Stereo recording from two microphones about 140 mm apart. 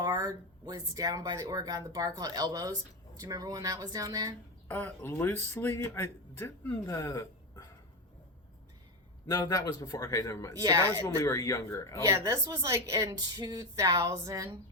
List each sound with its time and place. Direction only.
0.0 s speech: 30° right (ahead or behind)
4.7 s speech: 15° left (ahead or behind)
9.3 s a man's voice: 25° left (ahead or behind)
10.6 s speech: 25° right (ahead or behind)
11.0 s a man's voice: 25° left (ahead or behind)
12.0 s speech: 20° right (ahead or behind)